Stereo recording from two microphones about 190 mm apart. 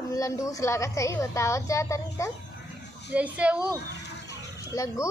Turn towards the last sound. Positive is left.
turn(degrees=15)  # may be behind; listen again after turning